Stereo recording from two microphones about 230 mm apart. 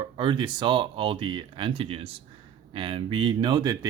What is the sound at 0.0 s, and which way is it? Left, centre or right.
Speech, centre.